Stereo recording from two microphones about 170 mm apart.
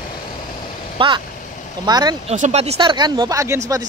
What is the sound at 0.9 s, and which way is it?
Speech, 30° right (ahead or behind).